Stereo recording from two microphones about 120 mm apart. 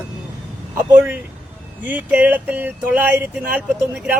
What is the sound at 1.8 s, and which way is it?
Speech, 10° right (ahead or behind).